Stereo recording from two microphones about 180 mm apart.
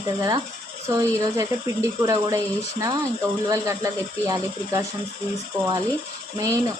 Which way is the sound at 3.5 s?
20° right (ahead or behind).